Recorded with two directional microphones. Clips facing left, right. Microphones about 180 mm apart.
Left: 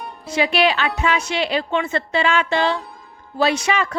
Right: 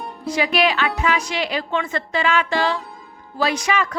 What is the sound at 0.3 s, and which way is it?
Speech, 25° left (ahead or behind).